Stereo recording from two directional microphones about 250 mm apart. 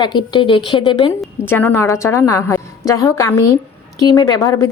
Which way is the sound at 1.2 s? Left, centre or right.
Centre.